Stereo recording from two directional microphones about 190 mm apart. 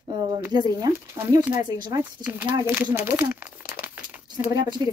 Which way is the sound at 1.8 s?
25° right (ahead or behind).